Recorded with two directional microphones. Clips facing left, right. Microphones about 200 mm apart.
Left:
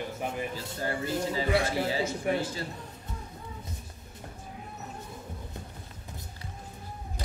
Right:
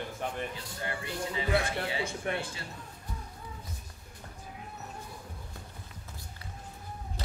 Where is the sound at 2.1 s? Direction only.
5° left (ahead or behind).